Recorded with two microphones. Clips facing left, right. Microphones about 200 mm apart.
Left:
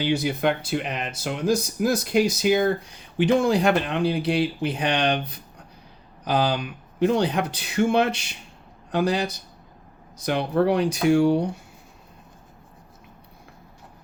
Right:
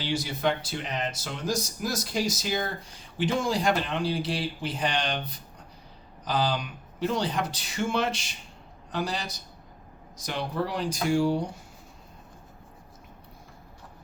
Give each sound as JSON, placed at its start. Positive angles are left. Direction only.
{"t": 0.0, "sound": "speech", "side_deg": 60}